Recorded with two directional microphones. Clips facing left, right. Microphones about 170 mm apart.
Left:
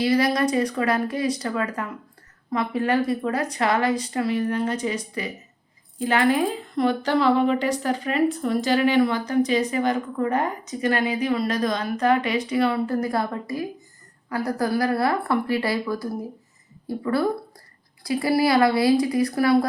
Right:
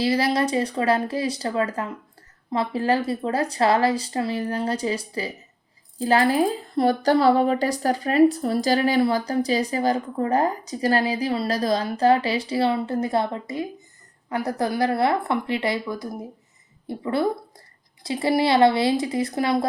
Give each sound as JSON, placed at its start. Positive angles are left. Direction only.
{"t": 0.0, "sound": "speech", "side_deg": -30}